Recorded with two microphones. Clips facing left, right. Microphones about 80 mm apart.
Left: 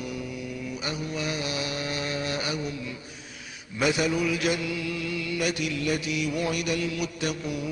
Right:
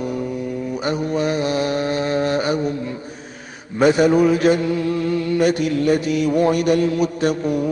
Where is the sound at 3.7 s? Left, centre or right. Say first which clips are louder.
Right 11 dB; right.